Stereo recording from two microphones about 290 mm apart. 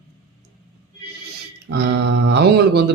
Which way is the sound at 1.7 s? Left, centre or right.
Right.